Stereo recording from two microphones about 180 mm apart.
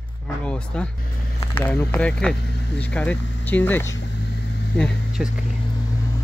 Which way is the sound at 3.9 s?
80° left.